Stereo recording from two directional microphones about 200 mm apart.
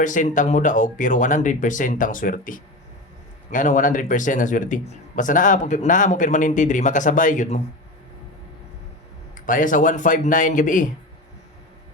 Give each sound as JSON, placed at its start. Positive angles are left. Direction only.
{"t": 0.0, "sound": "speech", "side_deg": 40}
{"t": 9.5, "sound": "speech", "side_deg": 40}